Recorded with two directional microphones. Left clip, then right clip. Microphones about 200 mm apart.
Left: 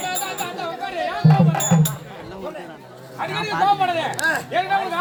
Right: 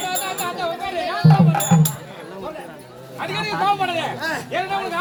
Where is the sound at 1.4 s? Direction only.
Centre (ahead or behind).